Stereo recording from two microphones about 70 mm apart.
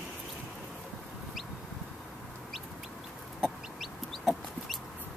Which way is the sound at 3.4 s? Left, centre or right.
Centre.